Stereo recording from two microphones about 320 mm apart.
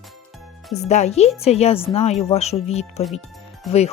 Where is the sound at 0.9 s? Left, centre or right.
Left.